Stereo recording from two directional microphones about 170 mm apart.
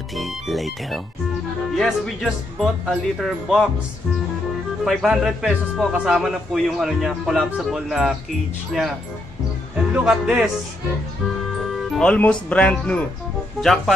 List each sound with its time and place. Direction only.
0.1 s speech: centre (ahead or behind)
4.8 s speech: centre (ahead or behind)
9.9 s speech: 5° right (ahead or behind)
11.7 s speech: 5° left (ahead or behind)